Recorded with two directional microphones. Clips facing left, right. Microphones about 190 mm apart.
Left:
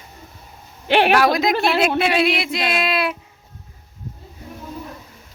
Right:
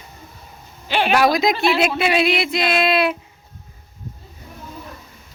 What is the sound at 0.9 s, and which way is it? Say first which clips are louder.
Speech: left 5 dB; 60° left (ahead or behind).